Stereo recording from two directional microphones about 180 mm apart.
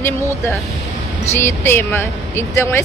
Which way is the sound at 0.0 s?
15° left (ahead or behind).